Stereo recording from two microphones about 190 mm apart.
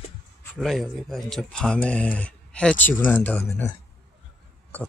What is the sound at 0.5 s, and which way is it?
Speech, centre (ahead or behind).